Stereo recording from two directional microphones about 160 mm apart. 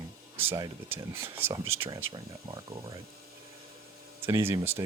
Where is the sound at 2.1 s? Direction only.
25° right (ahead or behind).